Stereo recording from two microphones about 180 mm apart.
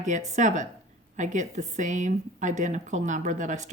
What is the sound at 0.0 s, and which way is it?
Speech, 45° right (ahead or behind).